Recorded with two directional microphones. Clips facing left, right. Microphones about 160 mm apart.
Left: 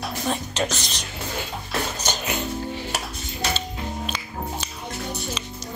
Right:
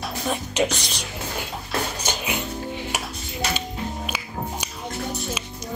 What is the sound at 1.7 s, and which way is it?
Music, 10° right (ahead or behind).